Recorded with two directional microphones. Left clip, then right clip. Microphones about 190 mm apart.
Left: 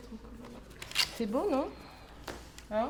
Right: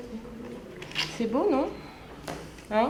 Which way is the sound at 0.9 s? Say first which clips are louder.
Right 3 dB; 30° left (ahead or behind).